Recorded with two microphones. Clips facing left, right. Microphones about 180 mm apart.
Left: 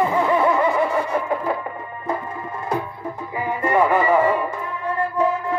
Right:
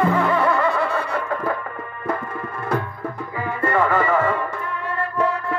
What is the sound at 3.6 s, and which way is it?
Music, 15° left (ahead or behind).